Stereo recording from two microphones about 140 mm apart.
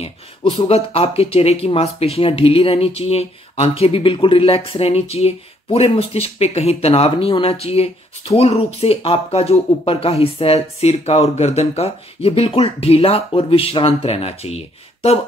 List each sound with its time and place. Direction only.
0.0 s speech: 40° left (ahead or behind)